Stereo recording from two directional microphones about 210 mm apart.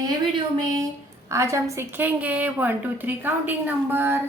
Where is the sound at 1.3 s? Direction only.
15° right (ahead or behind).